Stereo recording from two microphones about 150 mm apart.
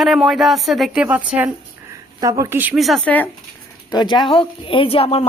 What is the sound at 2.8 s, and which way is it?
Speech, centre (ahead or behind).